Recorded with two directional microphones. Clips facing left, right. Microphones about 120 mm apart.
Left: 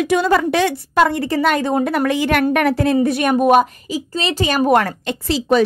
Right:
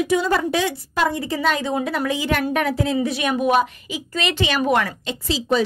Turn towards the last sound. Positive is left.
turn(degrees=65)  # may be behind; listen again after turning